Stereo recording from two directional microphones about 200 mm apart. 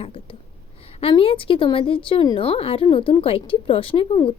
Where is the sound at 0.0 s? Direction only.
30° left (ahead or behind).